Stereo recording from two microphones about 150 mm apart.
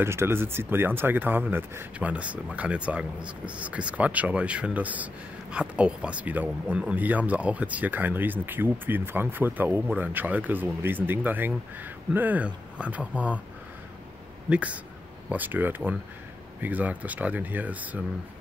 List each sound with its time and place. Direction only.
0.0 s speech: 15° right (ahead or behind)
14.5 s speech: 10° right (ahead or behind)